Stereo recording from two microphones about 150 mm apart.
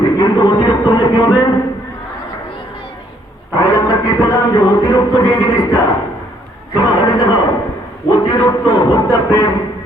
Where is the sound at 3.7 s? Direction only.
25° left (ahead or behind).